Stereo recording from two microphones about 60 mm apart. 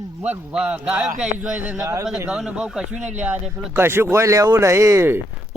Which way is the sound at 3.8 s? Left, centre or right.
Right.